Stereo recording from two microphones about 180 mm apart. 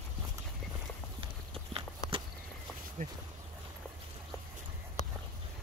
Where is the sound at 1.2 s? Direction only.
30° right (ahead or behind).